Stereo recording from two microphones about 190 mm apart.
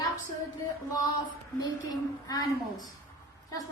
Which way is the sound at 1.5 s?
20° left (ahead or behind).